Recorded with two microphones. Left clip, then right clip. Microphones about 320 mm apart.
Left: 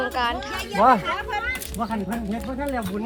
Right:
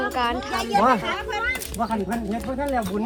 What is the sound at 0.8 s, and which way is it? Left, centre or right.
Speech, left.